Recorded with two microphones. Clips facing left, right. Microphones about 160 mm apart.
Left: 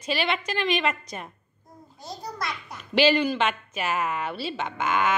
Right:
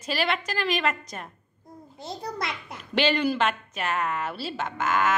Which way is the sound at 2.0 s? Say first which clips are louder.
Right 2 dB; 25° right (ahead or behind).